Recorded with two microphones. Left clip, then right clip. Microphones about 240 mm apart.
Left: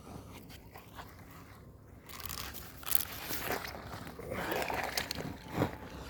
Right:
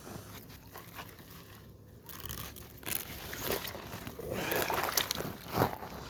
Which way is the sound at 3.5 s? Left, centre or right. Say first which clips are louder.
Right 3 dB; right.